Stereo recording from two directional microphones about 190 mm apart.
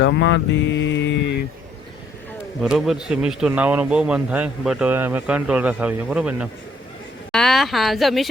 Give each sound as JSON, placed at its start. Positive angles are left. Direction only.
{"t": 0.0, "sound": "mantra", "side_deg": 70}
{"t": 2.6, "sound": "speech", "side_deg": 0}